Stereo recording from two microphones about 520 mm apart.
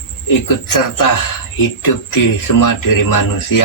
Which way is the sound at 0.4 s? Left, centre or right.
Left.